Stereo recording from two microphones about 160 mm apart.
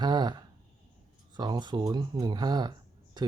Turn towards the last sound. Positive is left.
turn(degrees=-25)  # may be behind; listen again after turning